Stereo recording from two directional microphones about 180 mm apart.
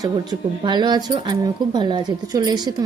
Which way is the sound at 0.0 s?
25° right (ahead or behind).